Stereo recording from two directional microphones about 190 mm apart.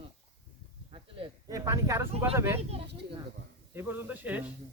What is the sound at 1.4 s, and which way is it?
Speech, 15° right (ahead or behind).